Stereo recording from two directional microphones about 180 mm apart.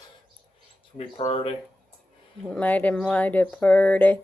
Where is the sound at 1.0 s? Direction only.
30° left (ahead or behind).